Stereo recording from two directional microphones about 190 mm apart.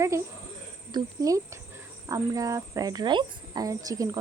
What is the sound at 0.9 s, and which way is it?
A woman's voice, 20° right (ahead or behind).